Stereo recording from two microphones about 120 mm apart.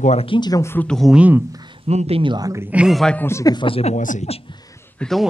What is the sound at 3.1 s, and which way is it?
Speech, 20° left (ahead or behind).